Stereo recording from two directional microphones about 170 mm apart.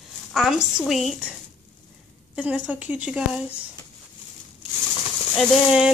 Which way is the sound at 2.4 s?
10° right (ahead or behind).